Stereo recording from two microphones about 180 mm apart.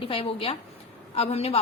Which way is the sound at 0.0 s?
30° left (ahead or behind).